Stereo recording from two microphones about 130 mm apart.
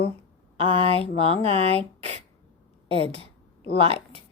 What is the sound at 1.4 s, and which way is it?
Speech, 50° right (ahead or behind).